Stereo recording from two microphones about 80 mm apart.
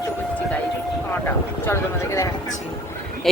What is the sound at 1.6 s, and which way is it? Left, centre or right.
Speech, left.